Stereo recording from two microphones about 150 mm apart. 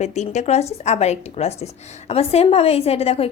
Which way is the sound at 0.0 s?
50° left (ahead or behind).